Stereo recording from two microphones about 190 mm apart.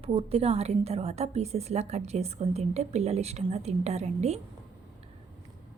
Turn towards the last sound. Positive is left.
turn(degrees=-35)  # may be behind; listen again after turning